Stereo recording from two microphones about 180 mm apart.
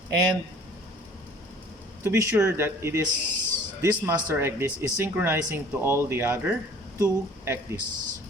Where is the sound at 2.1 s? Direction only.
15° right (ahead or behind).